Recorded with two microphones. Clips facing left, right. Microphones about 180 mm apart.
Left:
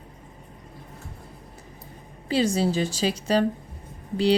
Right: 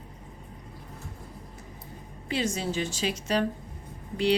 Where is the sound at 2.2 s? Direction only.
35° left (ahead or behind).